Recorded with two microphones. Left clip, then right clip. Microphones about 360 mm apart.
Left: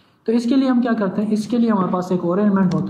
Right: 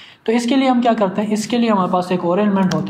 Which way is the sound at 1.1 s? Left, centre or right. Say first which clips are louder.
Right 2 dB; right.